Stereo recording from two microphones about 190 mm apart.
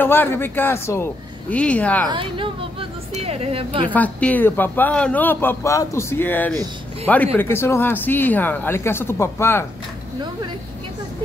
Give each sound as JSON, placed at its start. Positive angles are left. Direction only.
{"t": 0.0, "sound": "a man's voice", "side_deg": 10}
{"t": 2.0, "sound": "speech", "side_deg": -25}
{"t": 3.9, "sound": "a man's voice", "side_deg": 10}